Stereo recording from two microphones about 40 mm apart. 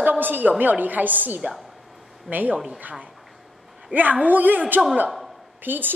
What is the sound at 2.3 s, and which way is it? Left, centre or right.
Speech, centre.